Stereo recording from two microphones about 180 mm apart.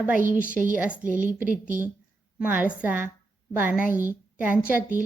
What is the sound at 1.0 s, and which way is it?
Speech, 45° right (ahead or behind).